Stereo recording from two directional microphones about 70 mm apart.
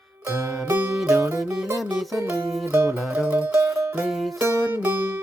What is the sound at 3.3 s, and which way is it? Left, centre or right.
Music, right.